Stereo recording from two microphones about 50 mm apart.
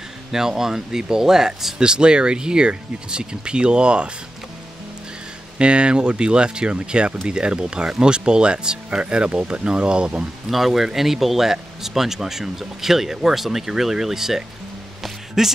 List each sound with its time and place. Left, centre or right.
0.3 s speech: centre
5.6 s speech: centre
10.5 s speech: centre
15.0 s music: centre